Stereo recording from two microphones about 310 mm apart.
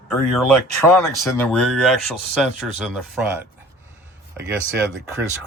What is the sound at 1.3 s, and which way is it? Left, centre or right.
Speech, centre.